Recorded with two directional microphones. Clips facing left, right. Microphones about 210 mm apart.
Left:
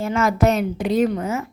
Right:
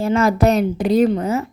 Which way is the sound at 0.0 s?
35° right (ahead or behind).